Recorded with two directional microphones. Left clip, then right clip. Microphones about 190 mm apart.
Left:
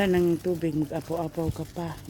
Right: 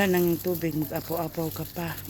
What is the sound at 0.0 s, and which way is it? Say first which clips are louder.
Speech: even; 25° left (ahead or behind).